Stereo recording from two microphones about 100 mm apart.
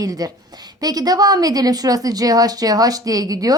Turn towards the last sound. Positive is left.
turn(degrees=-35)  # may be behind; listen again after turning